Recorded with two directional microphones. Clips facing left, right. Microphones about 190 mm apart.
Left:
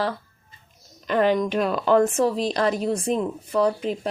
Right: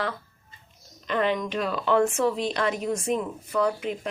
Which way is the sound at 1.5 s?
55° left (ahead or behind).